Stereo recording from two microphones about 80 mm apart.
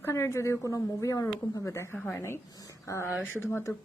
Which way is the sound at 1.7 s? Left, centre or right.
Left.